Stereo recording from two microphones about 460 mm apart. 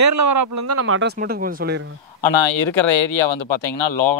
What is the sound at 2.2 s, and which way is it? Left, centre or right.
Speech, left.